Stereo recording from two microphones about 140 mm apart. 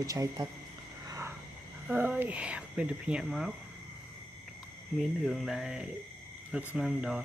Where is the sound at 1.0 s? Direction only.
20° right (ahead or behind).